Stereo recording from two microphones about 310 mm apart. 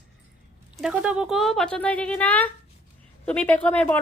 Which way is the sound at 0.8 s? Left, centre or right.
Centre.